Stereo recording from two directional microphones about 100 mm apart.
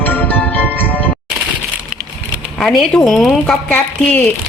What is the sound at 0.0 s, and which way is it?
Music, 20° left (ahead or behind).